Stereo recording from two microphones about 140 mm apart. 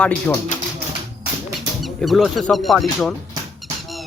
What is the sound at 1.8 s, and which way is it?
Speech, centre (ahead or behind).